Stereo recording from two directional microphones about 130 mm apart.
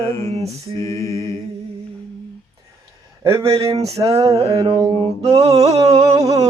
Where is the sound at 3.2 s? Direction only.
25° right (ahead or behind).